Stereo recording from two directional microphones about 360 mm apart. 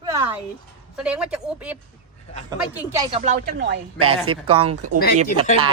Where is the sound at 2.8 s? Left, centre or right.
Centre.